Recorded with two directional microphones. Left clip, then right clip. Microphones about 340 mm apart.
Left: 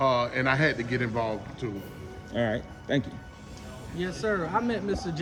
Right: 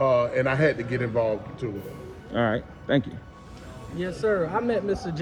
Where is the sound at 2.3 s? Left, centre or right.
Right.